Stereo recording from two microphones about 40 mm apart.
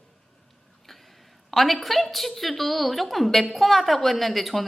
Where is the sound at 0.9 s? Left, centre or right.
Centre.